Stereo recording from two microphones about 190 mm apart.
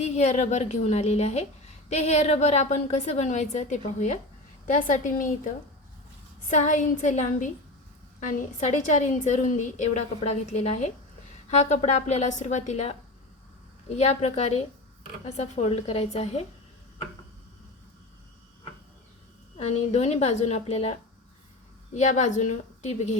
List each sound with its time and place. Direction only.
0.0 s a woman's voice: 35° left (ahead or behind)
6.5 s a woman's voice: 40° left (ahead or behind)
13.9 s a woman's voice: 35° left (ahead or behind)
19.5 s a woman's voice: 35° left (ahead or behind)